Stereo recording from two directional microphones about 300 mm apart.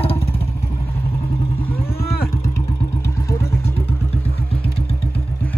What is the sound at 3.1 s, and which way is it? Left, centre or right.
Vehicle, centre.